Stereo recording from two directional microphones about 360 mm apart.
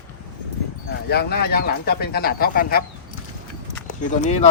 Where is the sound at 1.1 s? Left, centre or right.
Left.